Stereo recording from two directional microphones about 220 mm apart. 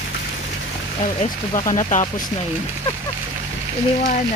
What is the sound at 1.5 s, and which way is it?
Speech, 30° left (ahead or behind).